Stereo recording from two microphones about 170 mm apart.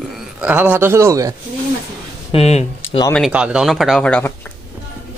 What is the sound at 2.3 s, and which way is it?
Speech, 35° left (ahead or behind).